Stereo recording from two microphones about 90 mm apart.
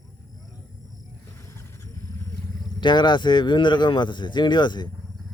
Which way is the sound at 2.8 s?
60° left (ahead or behind).